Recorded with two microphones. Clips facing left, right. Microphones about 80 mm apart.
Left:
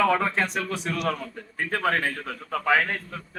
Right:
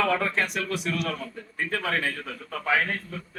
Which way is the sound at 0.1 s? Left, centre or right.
Left.